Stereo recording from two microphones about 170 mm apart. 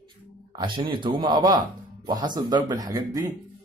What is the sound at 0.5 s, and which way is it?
Speech, 30° right (ahead or behind).